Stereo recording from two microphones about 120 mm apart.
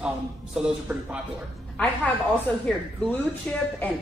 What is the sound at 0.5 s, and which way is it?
Speech, 10° right (ahead or behind).